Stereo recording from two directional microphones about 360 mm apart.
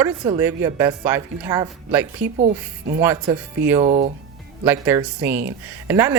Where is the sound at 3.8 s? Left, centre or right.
Centre.